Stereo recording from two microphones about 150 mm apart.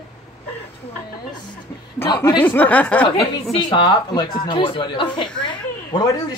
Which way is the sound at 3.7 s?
30° left (ahead or behind).